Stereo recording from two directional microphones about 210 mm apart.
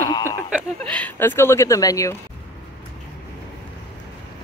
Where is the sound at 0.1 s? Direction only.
15° left (ahead or behind).